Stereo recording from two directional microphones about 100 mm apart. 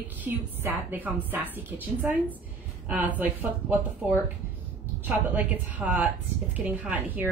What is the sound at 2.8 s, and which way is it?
Speech, 15° right (ahead or behind).